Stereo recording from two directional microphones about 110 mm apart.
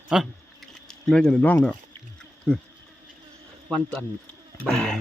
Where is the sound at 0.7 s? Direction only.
5° left (ahead or behind).